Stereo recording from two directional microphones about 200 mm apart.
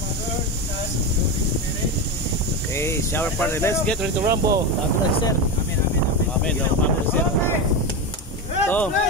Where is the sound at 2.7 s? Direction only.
15° left (ahead or behind).